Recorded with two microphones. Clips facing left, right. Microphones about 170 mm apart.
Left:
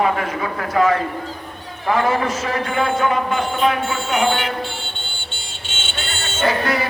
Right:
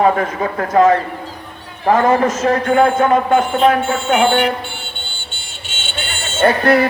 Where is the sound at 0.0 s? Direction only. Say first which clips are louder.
Right 5 dB; 40° right (ahead or behind).